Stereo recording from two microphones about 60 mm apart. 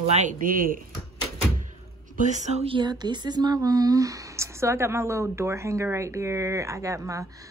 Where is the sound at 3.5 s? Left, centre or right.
Right.